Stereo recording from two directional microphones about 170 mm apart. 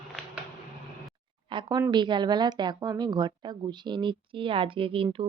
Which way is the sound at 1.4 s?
30° right (ahead or behind).